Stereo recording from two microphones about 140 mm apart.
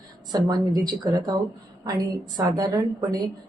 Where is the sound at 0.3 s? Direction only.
30° right (ahead or behind).